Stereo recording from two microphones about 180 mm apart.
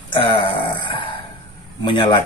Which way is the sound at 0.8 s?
30° left (ahead or behind).